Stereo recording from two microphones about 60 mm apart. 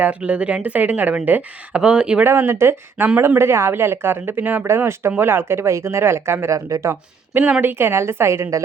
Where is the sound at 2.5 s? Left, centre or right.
Right.